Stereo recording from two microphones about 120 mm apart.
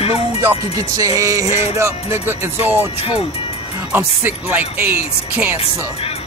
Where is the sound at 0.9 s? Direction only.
30° right (ahead or behind).